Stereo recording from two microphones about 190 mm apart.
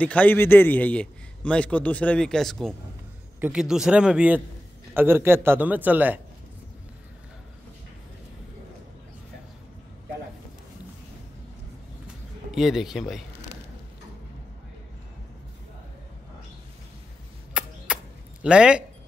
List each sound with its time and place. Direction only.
0.0 s a man's voice: 5° left (ahead or behind); by 6.2 s 10° right (ahead or behind)
12.4 s speech: centre (ahead or behind)
17.6 s a sound: 5° right (ahead or behind)
18.4 s speech: 5° right (ahead or behind)